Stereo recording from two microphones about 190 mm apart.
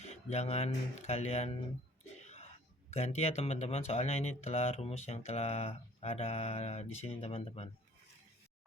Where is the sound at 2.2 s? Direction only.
35° left (ahead or behind).